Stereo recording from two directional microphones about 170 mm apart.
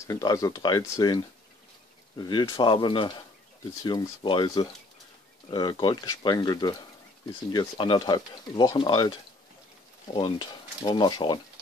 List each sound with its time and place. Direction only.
0.0 s speech: 20° left (ahead or behind)